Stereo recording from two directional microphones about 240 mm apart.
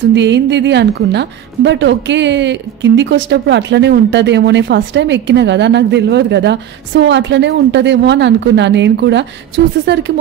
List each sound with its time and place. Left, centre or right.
0.1 s a woman's voice: right